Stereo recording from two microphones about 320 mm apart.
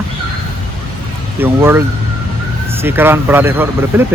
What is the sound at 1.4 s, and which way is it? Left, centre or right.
Speech, centre.